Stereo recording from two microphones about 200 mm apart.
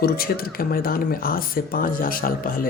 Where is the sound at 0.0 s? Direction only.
50° left (ahead or behind).